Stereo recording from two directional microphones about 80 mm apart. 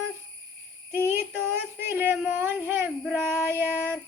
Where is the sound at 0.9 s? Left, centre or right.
Right.